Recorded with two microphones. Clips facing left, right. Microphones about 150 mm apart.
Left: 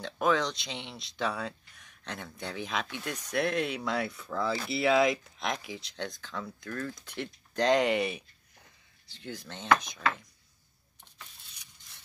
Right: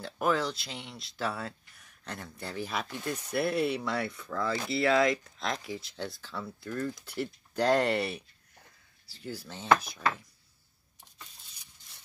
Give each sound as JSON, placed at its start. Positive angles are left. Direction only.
{"t": 0.0, "sound": "speech", "side_deg": -5}
{"t": 4.8, "sound": "speech", "side_deg": 20}
{"t": 5.7, "sound": "speech", "side_deg": -5}
{"t": 7.7, "sound": "speech", "side_deg": 10}
{"t": 9.0, "sound": "speech", "side_deg": -5}